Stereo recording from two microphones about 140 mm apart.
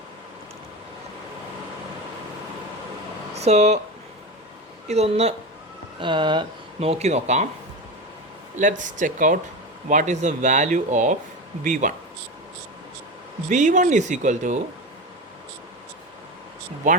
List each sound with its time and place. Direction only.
3.3 s speech: 50° right (ahead or behind)
4.9 s speech: 50° right (ahead or behind)
6.0 s speech: 35° right (ahead or behind)
6.7 s speech: 45° right (ahead or behind)
8.5 s speech: 65° right (ahead or behind)
13.5 s speech: 60° right (ahead or behind)
16.9 s speech: 65° right (ahead or behind)